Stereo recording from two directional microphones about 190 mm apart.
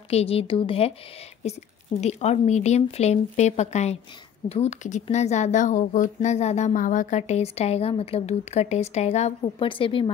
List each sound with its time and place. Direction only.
0.1 s speech: 30° left (ahead or behind)
2.0 s speech: 35° left (ahead or behind)